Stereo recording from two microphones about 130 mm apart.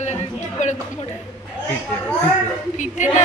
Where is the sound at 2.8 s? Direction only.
70° left (ahead or behind).